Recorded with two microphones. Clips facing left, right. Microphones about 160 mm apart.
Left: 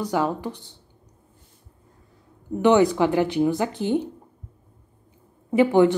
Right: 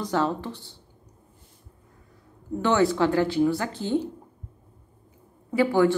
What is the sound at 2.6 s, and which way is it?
Speech, 20° left (ahead or behind).